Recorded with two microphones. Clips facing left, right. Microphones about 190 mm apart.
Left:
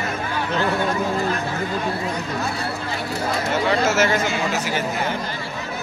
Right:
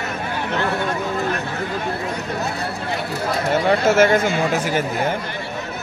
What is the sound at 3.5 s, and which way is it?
Speech, 55° right (ahead or behind).